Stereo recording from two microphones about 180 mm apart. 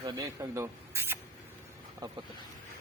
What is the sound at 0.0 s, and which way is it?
Speech, 20° right (ahead or behind).